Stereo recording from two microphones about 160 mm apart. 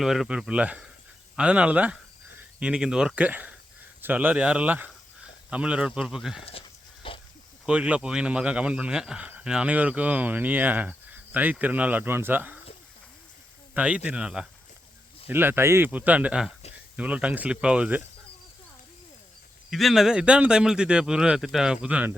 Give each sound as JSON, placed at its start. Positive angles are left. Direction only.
{"t": 0.0, "sound": "speech", "side_deg": 0}
{"t": 6.4, "sound": "dog", "side_deg": 35}
{"t": 7.6, "sound": "speech", "side_deg": -5}
{"t": 13.7, "sound": "speech", "side_deg": -5}
{"t": 19.7, "sound": "speech", "side_deg": 0}